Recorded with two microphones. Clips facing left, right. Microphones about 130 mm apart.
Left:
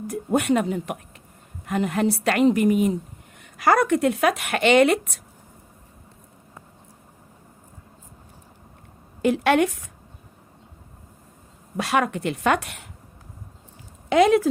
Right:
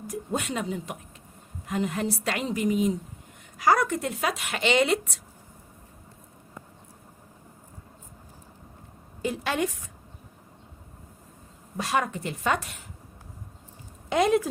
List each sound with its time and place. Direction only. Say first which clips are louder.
0.1 s speech: left 9 dB; 60° left (ahead or behind)
9.2 s a woman's voice: left 9 dB; 70° left (ahead or behind)
11.8 s a woman's voice: left 5 dB; 70° left (ahead or behind)
14.1 s speech: left 6 dB; 90° left